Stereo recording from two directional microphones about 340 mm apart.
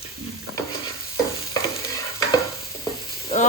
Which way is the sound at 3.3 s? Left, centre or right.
Centre.